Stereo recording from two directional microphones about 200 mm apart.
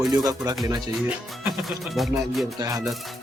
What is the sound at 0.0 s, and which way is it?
Speech, 20° right (ahead or behind).